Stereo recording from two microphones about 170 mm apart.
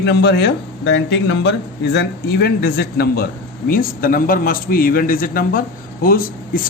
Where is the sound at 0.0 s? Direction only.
75° left (ahead or behind).